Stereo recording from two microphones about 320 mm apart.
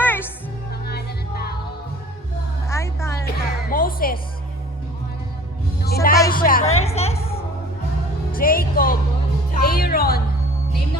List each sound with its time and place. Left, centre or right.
0.0 s music: centre
0.7 s music: left
2.6 s music: centre
3.2 s music: left
5.8 s music: left
6.3 s a woman's voice: left
9.5 s music: left